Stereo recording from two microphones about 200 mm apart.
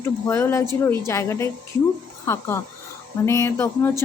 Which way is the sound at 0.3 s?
15° left (ahead or behind).